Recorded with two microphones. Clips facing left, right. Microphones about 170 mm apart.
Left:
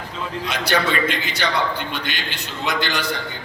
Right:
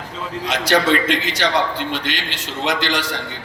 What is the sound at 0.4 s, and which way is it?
A man's voice, 90° right.